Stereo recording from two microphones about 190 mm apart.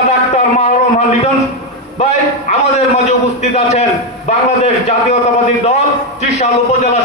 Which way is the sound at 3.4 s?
35° left (ahead or behind).